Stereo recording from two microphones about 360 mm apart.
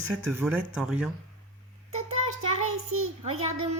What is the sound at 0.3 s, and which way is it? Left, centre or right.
Speech, centre.